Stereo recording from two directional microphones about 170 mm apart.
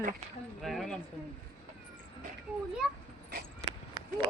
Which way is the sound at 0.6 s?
Centre (ahead or behind).